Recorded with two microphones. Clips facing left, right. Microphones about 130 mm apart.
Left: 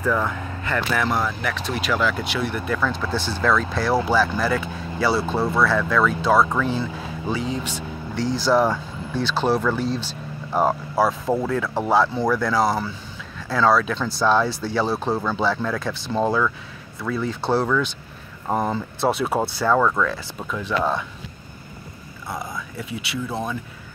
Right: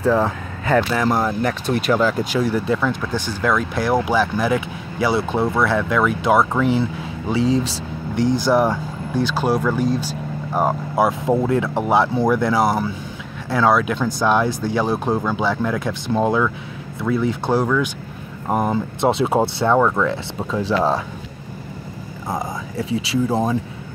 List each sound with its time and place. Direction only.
0.0 s speech: 30° right (ahead or behind)
0.9 s speech: 40° right (ahead or behind)
3.1 s speech: 15° right (ahead or behind)
8.2 s speech: 55° right (ahead or behind)
8.5 s speech: 15° right (ahead or behind)
11.0 s speech: 20° right (ahead or behind)
22.3 s speech: 45° right (ahead or behind)
22.8 s speech: 30° right (ahead or behind)